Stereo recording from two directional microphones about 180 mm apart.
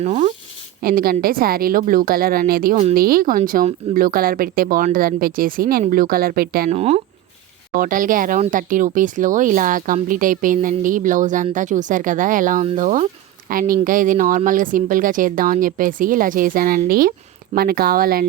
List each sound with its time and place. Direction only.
0.0 s speech: 40° right (ahead or behind)
0.8 s a woman's voice: 55° right (ahead or behind)
6.7 s speech: 35° right (ahead or behind)
7.8 s a woman's voice: 50° right (ahead or behind)